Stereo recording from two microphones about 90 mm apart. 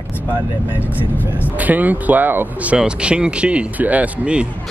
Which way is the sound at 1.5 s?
20° right (ahead or behind).